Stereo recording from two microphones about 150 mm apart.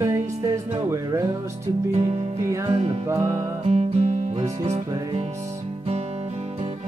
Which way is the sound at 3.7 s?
45° right (ahead or behind).